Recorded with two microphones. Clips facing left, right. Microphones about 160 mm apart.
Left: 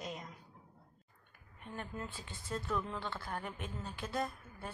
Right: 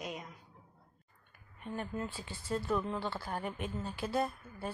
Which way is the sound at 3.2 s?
10° right (ahead or behind).